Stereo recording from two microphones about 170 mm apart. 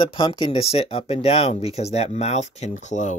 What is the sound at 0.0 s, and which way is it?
Speech, 30° left (ahead or behind).